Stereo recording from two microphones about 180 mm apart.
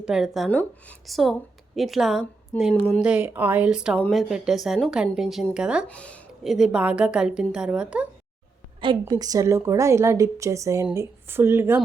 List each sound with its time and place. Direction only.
0.0 s a woman's voice: 5° right (ahead or behind)
5.9 s a woman's voice: 5° left (ahead or behind)
8.8 s a woman's voice: 25° right (ahead or behind)